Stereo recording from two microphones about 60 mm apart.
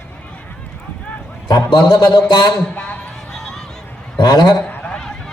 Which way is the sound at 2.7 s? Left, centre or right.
Left.